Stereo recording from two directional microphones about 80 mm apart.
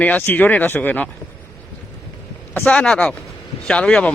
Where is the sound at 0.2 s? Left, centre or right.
Left.